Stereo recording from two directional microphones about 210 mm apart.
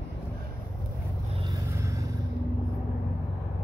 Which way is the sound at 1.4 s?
15° right (ahead or behind).